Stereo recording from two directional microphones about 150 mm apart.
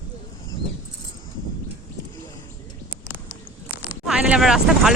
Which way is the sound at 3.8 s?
5° right (ahead or behind).